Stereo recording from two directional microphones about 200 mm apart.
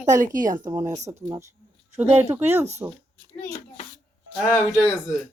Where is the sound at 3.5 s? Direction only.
35° left (ahead or behind).